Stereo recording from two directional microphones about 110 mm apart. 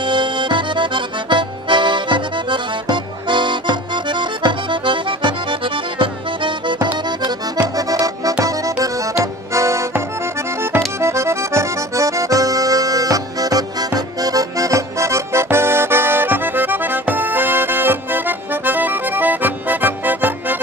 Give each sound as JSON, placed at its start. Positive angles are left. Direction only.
{"t": 0.0, "sound": "accordion", "side_deg": -45}
{"t": 7.7, "sound": "accordion", "side_deg": -35}